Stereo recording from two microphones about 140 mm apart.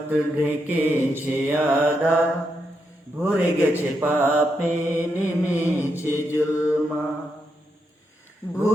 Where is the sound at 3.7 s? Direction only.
15° right (ahead or behind).